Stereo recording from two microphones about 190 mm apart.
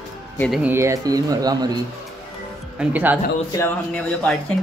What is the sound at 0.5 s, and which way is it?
Speech, 10° right (ahead or behind).